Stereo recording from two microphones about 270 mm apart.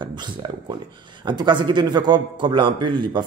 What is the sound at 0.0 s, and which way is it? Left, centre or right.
Speech, centre.